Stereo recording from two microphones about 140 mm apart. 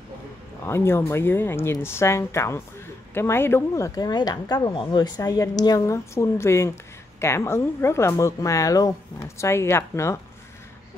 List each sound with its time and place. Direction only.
0.7 s speech: 15° left (ahead or behind)